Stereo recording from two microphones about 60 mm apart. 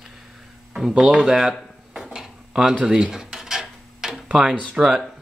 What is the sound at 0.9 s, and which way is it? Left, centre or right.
Speech, centre.